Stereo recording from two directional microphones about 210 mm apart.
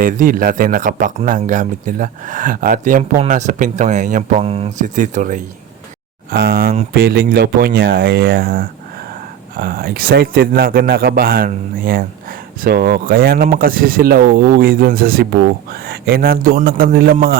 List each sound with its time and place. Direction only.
0.0 s speech: 40° right (ahead or behind)